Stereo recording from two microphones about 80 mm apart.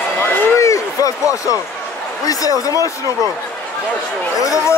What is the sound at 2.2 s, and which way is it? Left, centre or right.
Speech, left.